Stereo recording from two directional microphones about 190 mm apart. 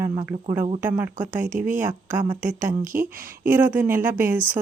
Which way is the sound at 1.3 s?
40° right (ahead or behind).